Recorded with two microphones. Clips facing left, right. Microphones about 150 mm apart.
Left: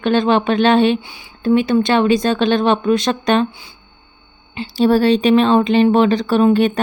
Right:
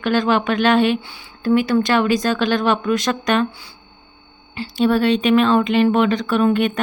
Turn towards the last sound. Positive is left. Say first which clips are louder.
# left 4 dB
turn(degrees=30)  # may be behind; listen again after turning